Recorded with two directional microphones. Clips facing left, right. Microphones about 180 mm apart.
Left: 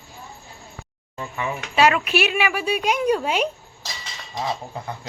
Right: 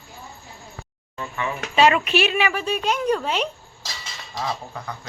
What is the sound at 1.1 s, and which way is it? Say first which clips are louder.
Speech: even; 20° left (ahead or behind).